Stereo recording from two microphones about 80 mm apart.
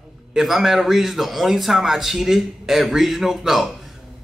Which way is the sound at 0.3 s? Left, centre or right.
Centre.